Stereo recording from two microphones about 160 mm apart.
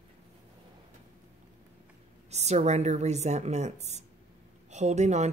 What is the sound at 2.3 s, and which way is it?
Speech, 45° right (ahead or behind).